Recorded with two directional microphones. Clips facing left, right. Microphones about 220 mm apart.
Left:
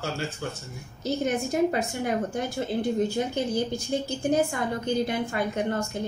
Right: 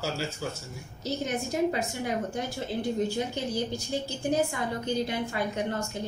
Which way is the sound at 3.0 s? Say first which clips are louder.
Left 3 dB; 50° left (ahead or behind).